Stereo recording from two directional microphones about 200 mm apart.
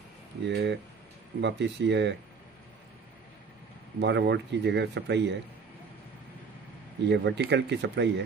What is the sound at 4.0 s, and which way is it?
Speech, 60° right (ahead or behind).